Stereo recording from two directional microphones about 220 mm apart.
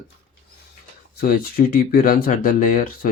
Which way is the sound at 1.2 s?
45° left (ahead or behind).